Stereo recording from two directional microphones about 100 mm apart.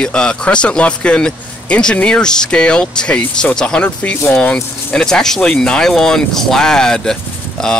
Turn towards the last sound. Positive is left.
turn(degrees=5)  # may be behind; listen again after turning